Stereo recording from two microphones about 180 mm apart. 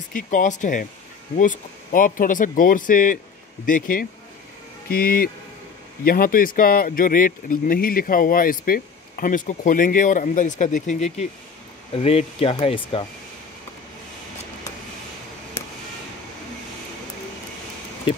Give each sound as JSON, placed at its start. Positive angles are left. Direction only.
{"t": 0.1, "sound": "speech", "side_deg": 45}
{"t": 11.9, "sound": "speech", "side_deg": 35}